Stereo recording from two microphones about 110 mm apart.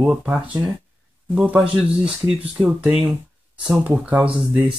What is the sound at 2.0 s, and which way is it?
Speech, 60° right (ahead or behind).